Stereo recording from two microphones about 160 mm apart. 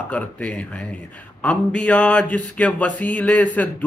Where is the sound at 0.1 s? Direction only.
10° left (ahead or behind).